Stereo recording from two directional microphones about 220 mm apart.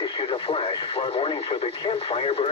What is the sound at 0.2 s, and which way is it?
Speech, 25° left (ahead or behind).